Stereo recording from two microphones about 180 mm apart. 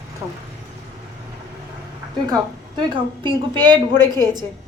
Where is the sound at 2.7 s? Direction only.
25° right (ahead or behind).